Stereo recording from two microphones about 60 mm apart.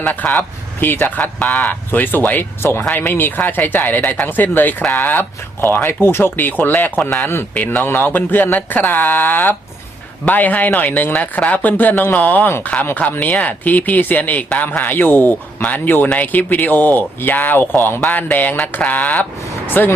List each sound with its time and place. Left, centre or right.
0.2 s speech: centre
0.8 s speech: left
1.4 s speech: centre
1.7 s speech: left